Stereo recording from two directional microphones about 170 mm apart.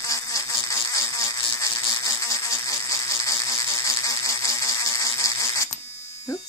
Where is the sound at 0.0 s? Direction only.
20° left (ahead or behind).